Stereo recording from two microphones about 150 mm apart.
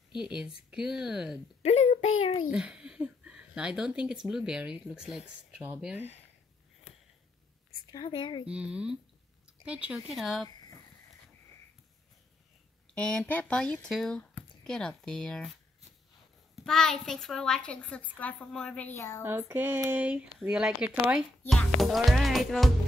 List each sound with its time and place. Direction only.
0.1 s speech: 30° left (ahead or behind)
0.7 s speech: 5° right (ahead or behind)
1.6 s a child's voice: 45° left (ahead or behind)
2.5 s speech: 5° right (ahead or behind)
7.8 s speech: 30° left (ahead or behind)
8.5 s speech: 5° right (ahead or behind)
12.9 s speech: 5° left (ahead or behind)
16.5 s speech: 5° left (ahead or behind)
19.2 s speech: 15° right (ahead or behind); by 22.7 s centre (ahead or behind)